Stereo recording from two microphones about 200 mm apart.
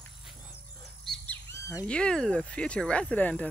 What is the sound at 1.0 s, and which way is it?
Speech, 10° left (ahead or behind).